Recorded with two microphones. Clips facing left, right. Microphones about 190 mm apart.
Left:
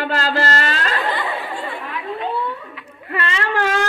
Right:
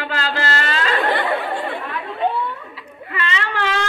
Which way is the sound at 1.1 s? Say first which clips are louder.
Right 4 dB; 80° right.